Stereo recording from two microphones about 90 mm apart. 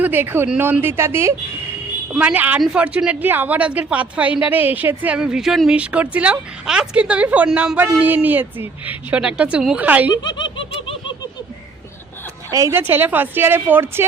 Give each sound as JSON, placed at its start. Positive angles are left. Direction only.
{"t": 0.0, "sound": "a woman's voice", "side_deg": -20}
{"t": 2.1, "sound": "a woman's voice", "side_deg": -15}
{"t": 10.1, "sound": "laughter", "side_deg": 55}
{"t": 12.5, "sound": "a woman's voice", "side_deg": -40}
{"t": 12.7, "sound": "a woman's voice", "side_deg": -25}